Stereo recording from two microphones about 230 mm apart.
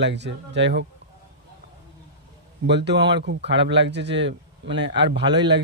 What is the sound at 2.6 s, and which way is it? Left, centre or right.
Speech, right.